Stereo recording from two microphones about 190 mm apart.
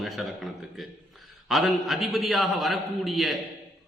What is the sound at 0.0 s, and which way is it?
A man's voice, centre (ahead or behind).